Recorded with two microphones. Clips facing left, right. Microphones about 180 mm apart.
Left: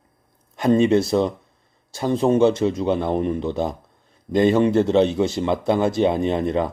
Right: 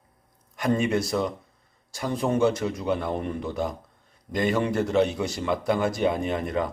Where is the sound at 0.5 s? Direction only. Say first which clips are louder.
Left 7 dB; 25° left (ahead or behind).